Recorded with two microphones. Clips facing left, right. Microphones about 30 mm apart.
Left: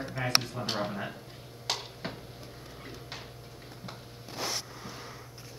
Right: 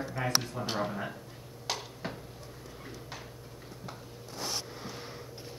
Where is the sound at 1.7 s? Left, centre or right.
Left.